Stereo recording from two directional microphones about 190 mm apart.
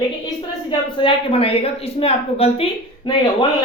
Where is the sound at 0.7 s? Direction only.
25° left (ahead or behind).